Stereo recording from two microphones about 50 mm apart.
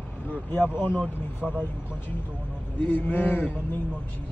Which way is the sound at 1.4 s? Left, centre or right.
Centre.